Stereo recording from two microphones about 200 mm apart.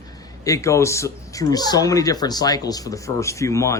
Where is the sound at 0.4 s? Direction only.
15° left (ahead or behind).